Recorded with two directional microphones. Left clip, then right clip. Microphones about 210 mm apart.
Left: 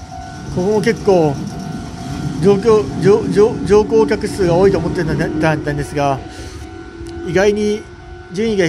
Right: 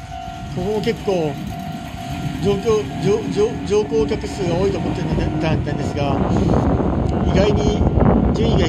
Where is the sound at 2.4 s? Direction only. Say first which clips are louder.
Left 7 dB; 20° left (ahead or behind).